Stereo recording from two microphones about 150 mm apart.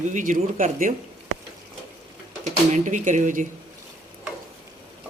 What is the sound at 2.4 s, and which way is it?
Speech, 55° right (ahead or behind).